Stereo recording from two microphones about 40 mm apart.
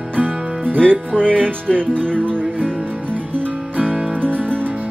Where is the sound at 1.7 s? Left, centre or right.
Centre.